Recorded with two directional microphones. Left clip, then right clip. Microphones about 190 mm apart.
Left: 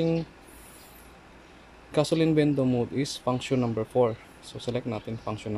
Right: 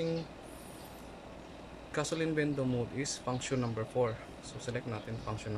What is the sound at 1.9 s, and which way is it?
Speech, 25° left (ahead or behind).